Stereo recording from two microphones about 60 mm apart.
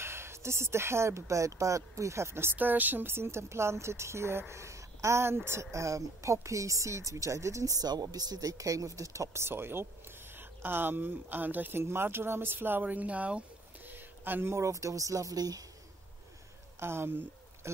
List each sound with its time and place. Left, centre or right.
0.0 s speech: right
2.5 s speech: right
13.8 s a sound: right
14.5 s speech: right
16.8 s speech: right